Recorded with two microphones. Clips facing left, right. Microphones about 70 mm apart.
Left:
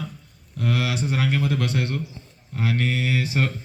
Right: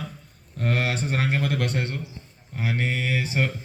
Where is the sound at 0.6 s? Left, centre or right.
Right.